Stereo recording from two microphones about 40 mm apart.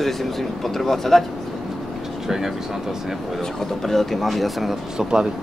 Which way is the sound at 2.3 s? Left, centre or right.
Centre.